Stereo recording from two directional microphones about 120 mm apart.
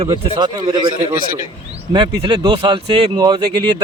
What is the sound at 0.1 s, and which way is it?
Speech, 40° right (ahead or behind).